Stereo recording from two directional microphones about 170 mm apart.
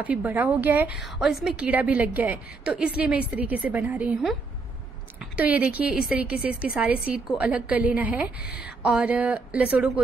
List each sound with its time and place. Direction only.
0.0 s a woman's voice: 10° right (ahead or behind)